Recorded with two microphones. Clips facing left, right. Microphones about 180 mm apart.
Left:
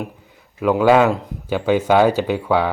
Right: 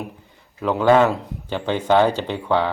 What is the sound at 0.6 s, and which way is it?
Speech, 5° left (ahead or behind).